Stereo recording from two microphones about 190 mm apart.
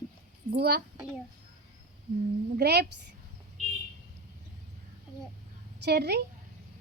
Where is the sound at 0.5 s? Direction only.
55° right (ahead or behind).